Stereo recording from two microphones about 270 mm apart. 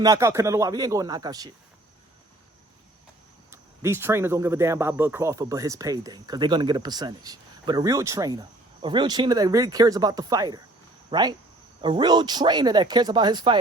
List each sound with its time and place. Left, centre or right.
0.0 s speech: centre
3.5 s speech: centre